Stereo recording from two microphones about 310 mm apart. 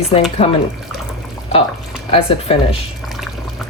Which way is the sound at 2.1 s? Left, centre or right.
Centre.